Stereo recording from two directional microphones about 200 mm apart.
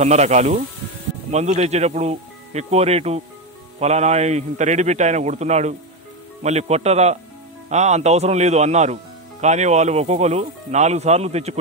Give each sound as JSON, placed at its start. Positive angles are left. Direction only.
{"t": 0.0, "sound": "speech", "side_deg": -35}